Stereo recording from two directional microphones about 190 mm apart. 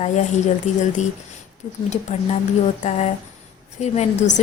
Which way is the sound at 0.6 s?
40° left (ahead or behind).